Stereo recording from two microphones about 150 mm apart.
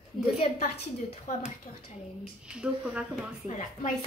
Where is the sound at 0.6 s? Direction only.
45° left (ahead or behind).